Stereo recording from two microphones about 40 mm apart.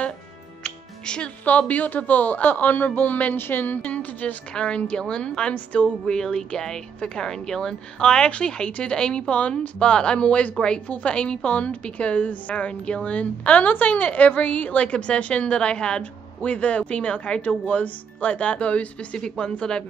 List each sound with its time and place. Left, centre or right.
0.7 s music: left
1.7 s speech: left
3.3 s speech: left
3.8 s speech: left
4.6 s speech: left
5.5 s a woman's voice: left
6.0 s a woman's voice: centre
16.0 s a woman's voice: left
19.1 s speech: left